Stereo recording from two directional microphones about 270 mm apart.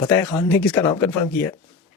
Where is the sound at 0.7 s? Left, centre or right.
Centre.